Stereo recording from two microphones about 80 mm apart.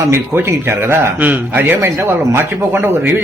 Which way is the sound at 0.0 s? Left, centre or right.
Right.